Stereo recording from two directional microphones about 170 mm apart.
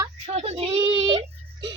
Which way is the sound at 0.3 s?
35° right (ahead or behind).